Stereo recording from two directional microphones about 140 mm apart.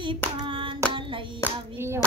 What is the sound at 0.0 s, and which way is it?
Hands, 35° right (ahead or behind).